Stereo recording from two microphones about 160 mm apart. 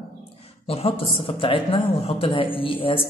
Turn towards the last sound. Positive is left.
turn(degrees=35)  # may be behind; listen again after turning